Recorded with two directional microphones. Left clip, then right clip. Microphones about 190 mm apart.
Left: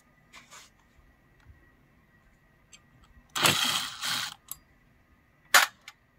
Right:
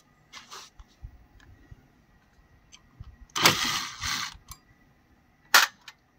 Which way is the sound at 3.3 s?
15° left (ahead or behind).